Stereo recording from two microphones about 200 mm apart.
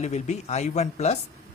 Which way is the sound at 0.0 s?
35° left (ahead or behind).